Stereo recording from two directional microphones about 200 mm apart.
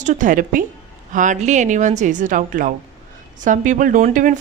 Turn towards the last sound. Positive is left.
turn(degrees=-40)  # may be behind; listen again after turning